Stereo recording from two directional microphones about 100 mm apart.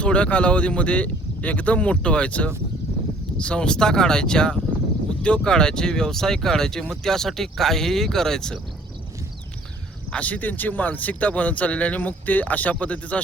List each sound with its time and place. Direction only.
0.0 s speech: 10° left (ahead or behind)
10.1 s speech: 15° left (ahead or behind)